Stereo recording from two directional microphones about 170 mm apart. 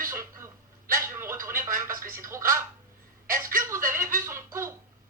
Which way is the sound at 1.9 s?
55° right (ahead or behind).